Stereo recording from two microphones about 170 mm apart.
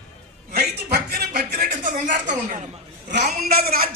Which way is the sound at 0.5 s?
65° right (ahead or behind).